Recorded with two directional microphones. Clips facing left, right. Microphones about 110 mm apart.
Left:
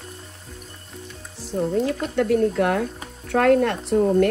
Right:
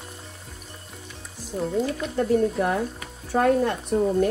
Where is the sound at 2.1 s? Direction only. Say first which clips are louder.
Left 2 dB; 75° left (ahead or behind).